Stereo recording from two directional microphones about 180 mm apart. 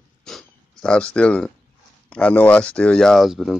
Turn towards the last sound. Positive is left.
turn(degrees=0)  # may be behind; listen again after turning